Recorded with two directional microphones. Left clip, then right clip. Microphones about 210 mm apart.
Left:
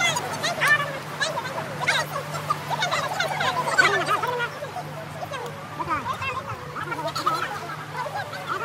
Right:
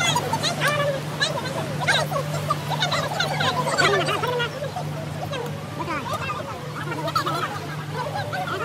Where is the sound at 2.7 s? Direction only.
20° left (ahead or behind).